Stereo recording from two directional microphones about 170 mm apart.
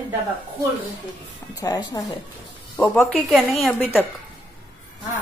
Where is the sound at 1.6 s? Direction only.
20° left (ahead or behind).